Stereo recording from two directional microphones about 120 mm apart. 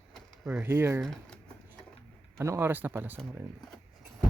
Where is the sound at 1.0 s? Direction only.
5° left (ahead or behind).